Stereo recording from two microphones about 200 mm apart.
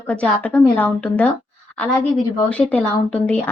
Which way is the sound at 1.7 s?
5° left (ahead or behind).